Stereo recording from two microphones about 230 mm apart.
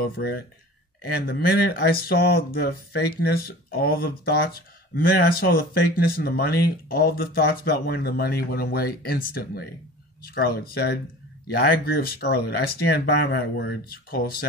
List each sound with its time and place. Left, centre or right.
0.0 s speech: left